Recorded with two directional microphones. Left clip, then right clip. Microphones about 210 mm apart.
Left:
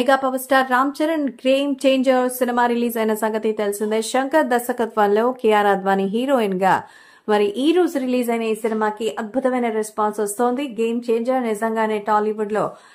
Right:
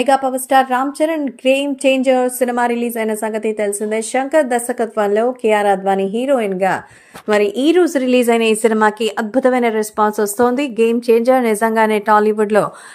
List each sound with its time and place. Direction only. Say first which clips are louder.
0.0 s a woman's voice: right 3 dB; centre (ahead or behind); by 12.6 s 30° right (ahead or behind)